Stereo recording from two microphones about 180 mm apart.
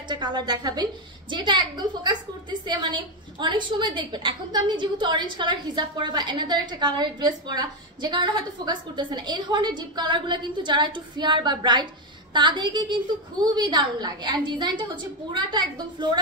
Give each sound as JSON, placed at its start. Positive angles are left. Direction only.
{"t": 0.1, "sound": "a woman's voice", "side_deg": -25}